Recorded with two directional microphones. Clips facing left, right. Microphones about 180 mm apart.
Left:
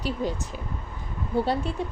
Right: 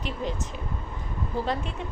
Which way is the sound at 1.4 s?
35° left (ahead or behind).